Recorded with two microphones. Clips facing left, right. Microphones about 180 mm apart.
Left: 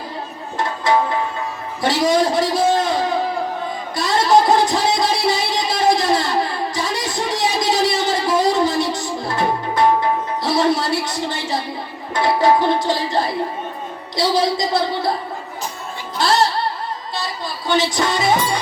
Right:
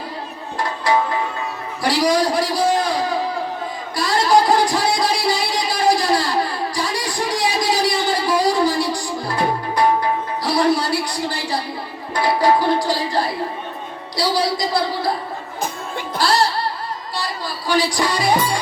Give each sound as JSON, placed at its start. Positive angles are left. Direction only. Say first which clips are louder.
{"t": 1.8, "sound": "a man's voice", "louder": "left 1 dB", "side_deg": 20}
{"t": 3.9, "sound": "a sound", "louder": "even", "side_deg": 20}
{"t": 4.3, "sound": "music", "louder": "left 1 dB", "side_deg": 20}
{"t": 10.4, "sound": "a sound", "louder": "even", "side_deg": 20}
{"t": 12.1, "sound": "music", "louder": "left 1 dB", "side_deg": 20}
{"t": 16.1, "sound": "music", "louder": "left 1 dB", "side_deg": 20}
{"t": 17.7, "sound": "music", "louder": "left 1 dB", "side_deg": 20}